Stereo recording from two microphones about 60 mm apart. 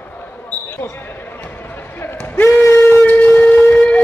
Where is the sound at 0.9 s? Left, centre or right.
Left.